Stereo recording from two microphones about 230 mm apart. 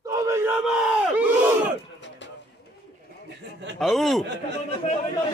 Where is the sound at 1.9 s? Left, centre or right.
Left.